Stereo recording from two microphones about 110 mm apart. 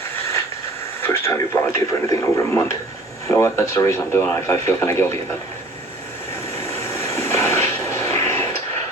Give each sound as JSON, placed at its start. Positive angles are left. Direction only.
{"t": 1.0, "sound": "speech", "side_deg": 25}
{"t": 6.9, "sound": "vehicle", "side_deg": 25}